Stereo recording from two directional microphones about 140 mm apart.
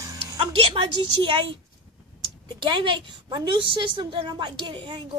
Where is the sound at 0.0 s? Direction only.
20° right (ahead or behind).